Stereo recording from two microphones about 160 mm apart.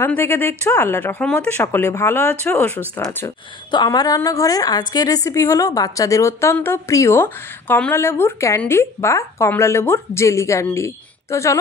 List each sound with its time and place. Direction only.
0.0 s speech: 15° left (ahead or behind)
3.7 s a woman's voice: 25° left (ahead or behind)